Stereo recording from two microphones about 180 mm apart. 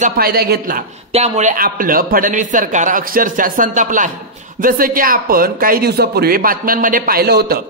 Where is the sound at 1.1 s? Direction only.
40° right (ahead or behind).